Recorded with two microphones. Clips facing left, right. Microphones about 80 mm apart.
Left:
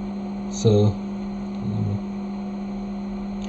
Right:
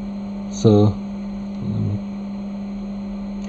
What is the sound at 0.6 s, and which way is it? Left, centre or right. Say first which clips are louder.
Speech: right 4 dB; right.